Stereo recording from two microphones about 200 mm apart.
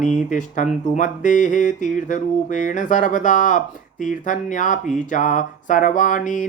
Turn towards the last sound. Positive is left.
turn(degrees=40)  # may be behind; listen again after turning